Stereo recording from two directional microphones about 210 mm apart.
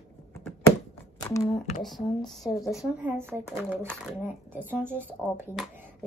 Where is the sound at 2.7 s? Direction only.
10° right (ahead or behind).